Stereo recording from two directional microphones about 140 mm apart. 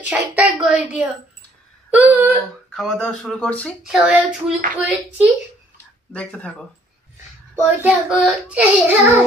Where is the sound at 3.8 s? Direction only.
5° right (ahead or behind).